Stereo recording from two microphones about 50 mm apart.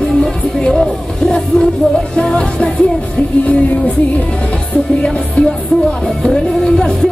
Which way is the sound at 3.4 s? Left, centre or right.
Left.